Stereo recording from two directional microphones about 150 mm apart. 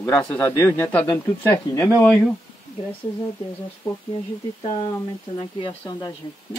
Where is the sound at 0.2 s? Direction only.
10° left (ahead or behind).